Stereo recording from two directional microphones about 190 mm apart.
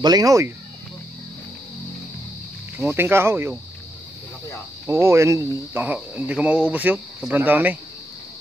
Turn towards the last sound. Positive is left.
turn(degrees=-10)  # may be behind; listen again after turning